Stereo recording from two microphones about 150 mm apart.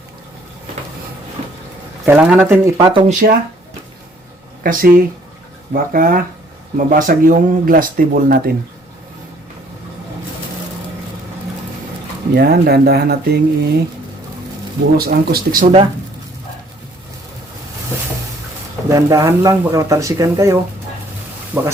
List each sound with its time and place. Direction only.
2.0 s speech: 15° right (ahead or behind)
2.7 s speech: 30° right (ahead or behind)
3.1 s speech: 60° right (ahead or behind)
4.6 s speech: 65° right (ahead or behind)
12.3 s speech: 90° right
14.9 s speech: 90° right
15.6 s speech: 40° right (ahead or behind)
18.9 s speech: 20° right (ahead or behind)